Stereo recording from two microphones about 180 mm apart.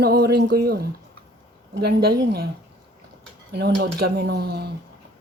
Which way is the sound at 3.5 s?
60° right (ahead or behind).